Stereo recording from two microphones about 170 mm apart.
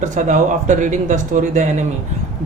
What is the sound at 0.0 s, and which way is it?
Speech, 45° right (ahead or behind).